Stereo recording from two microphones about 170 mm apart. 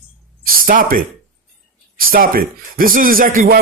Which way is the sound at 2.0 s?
55° right (ahead or behind).